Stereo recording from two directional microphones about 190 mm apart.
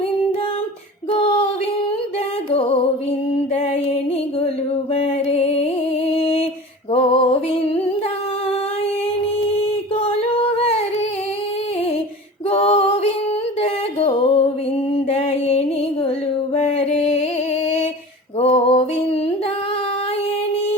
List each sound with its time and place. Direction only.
1.1 s a sound: 30° left (ahead or behind)
2.5 s music: 30° left (ahead or behind)
5.3 s music: 35° left (ahead or behind)
6.9 s a sound: 30° left (ahead or behind)
9.6 s singing: 30° left (ahead or behind)
12.5 s female singing: 30° left (ahead or behind)
13.6 s a sound: 30° left (ahead or behind)
14.9 s mantra: 35° left (ahead or behind)
16.6 s music: 35° left (ahead or behind)
18.3 s music: 30° left (ahead or behind)